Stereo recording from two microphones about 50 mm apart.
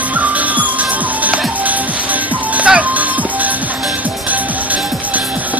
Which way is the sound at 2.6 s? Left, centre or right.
Right.